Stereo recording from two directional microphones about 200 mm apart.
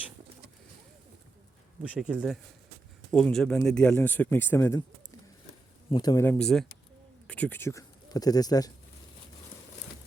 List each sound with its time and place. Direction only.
1.8 s speech: 5° right (ahead or behind); by 4.8 s 10° left (ahead or behind)
5.9 s speech: 20° left (ahead or behind)